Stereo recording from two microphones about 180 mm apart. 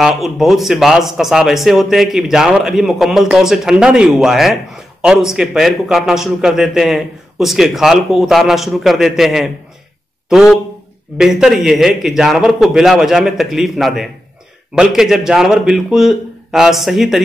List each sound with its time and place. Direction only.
0.0 s speech: centre (ahead or behind)